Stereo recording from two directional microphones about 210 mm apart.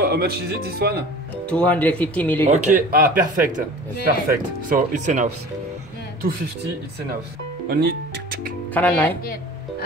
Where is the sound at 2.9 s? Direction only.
40° right (ahead or behind).